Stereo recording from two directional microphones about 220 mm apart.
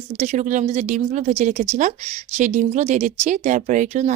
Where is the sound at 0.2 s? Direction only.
35° right (ahead or behind).